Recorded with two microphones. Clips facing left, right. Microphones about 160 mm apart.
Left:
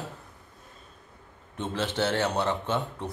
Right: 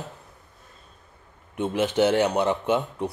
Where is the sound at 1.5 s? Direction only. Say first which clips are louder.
Right 7 dB; 15° right (ahead or behind).